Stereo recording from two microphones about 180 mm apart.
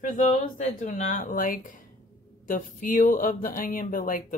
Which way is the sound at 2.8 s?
50° left (ahead or behind).